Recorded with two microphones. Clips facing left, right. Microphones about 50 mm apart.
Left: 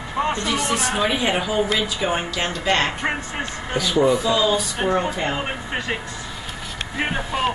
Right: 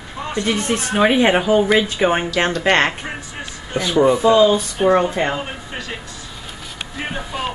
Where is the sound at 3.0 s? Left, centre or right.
Left.